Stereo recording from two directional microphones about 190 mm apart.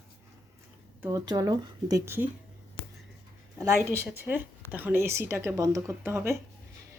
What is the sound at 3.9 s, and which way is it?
Speech, 10° right (ahead or behind).